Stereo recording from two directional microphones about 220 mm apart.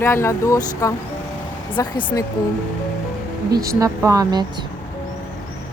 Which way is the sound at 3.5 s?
15° right (ahead or behind).